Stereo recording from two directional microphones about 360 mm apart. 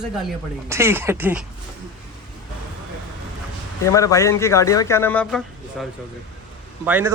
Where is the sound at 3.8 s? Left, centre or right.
Centre.